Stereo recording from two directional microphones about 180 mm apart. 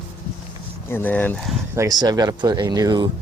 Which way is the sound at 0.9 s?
10° left (ahead or behind).